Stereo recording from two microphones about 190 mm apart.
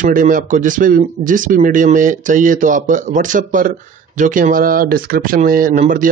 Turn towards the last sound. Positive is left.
turn(degrees=-45)  # may be behind; listen again after turning